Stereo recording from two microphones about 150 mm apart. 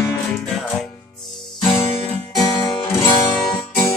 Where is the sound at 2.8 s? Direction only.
15° left (ahead or behind).